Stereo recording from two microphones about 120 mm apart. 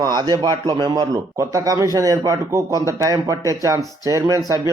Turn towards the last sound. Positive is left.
turn(degrees=-30)  # may be behind; listen again after turning